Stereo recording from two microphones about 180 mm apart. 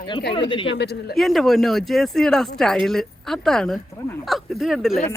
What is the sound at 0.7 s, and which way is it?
Speech, 70° left (ahead or behind).